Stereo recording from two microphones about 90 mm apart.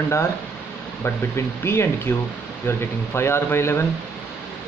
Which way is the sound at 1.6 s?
30° left (ahead or behind).